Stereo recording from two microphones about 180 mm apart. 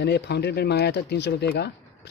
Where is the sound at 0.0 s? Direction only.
70° left (ahead or behind).